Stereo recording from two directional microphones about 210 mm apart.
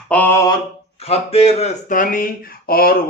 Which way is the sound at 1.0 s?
30° left (ahead or behind).